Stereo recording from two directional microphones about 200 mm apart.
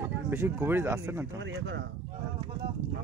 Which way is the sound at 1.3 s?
65° right (ahead or behind).